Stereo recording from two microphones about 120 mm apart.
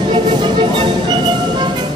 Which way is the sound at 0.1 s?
40° right (ahead or behind).